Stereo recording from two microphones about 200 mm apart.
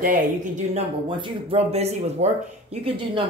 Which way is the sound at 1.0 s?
25° right (ahead or behind).